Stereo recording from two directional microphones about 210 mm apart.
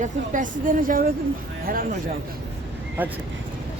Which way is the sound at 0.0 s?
40° right (ahead or behind).